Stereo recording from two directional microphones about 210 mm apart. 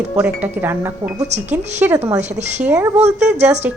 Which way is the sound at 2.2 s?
35° right (ahead or behind).